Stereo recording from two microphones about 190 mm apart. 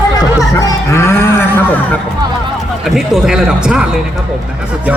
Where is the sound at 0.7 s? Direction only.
15° left (ahead or behind).